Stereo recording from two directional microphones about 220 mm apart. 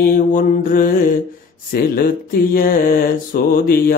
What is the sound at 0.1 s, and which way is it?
Speech, 40° left (ahead or behind).